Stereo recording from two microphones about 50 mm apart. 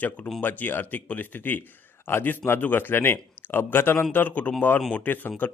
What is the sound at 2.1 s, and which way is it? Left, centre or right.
Speech, left.